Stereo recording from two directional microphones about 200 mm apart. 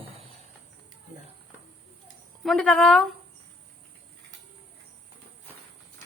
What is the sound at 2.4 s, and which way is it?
Speech, 5° left (ahead or behind).